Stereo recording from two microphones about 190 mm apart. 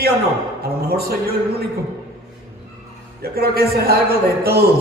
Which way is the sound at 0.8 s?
55° right (ahead or behind).